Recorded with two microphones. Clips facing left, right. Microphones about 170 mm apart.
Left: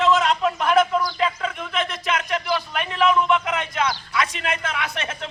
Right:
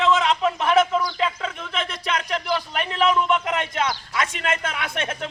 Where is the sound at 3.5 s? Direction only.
45° right (ahead or behind).